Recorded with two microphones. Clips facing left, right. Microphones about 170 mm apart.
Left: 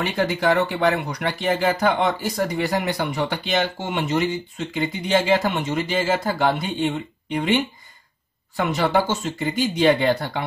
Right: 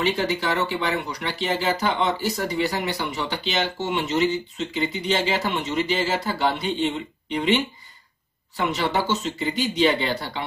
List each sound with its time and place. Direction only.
0.0 s speech: 50° left (ahead or behind)